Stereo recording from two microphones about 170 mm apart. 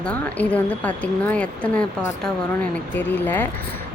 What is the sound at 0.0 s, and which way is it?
Speech, 10° left (ahead or behind).